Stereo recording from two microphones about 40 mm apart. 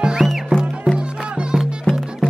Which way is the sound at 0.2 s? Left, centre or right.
Centre.